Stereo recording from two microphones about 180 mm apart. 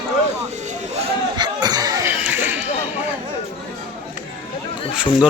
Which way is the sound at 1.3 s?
25° right (ahead or behind).